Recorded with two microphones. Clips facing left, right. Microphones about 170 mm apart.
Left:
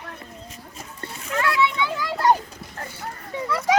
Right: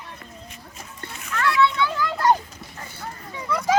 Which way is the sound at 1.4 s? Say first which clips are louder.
Right 2 dB; 15° left (ahead or behind).